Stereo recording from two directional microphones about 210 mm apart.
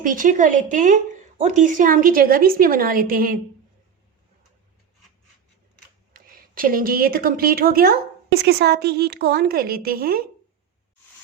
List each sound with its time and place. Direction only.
0.0 s a woman's voice: 40° right (ahead or behind)
6.1 s a woman's voice: 40° right (ahead or behind)